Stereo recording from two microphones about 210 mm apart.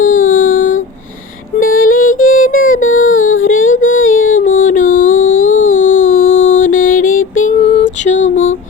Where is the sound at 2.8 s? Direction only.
70° left (ahead or behind).